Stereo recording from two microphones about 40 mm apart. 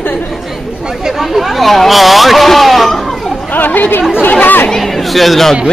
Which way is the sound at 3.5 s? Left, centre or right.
Left.